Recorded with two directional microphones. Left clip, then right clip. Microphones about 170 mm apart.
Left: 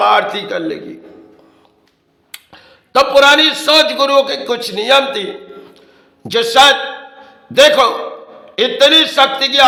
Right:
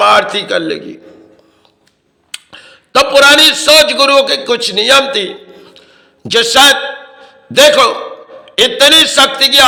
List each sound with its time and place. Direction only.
0.0 s a man's voice: 15° right (ahead or behind)
2.3 s a man's voice: 15° right (ahead or behind)
7.2 s a sound: 15° right (ahead or behind)
8.5 s a man's voice: 15° right (ahead or behind)